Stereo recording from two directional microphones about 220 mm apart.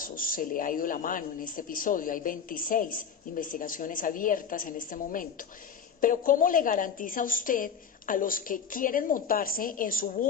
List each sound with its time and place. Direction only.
0.0 s a man's voice: 40° left (ahead or behind)